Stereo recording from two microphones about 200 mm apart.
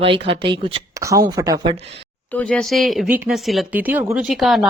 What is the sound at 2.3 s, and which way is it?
A woman's voice, 5° left (ahead or behind).